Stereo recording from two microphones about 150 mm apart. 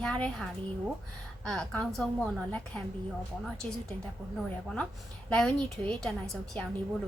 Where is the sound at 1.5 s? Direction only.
5° left (ahead or behind).